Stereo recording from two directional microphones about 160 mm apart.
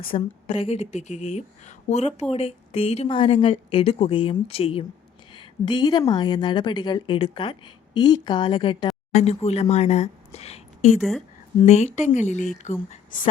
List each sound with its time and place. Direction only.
0.1 s a woman's voice: 35° left (ahead or behind); by 13.2 s 60° left (ahead or behind)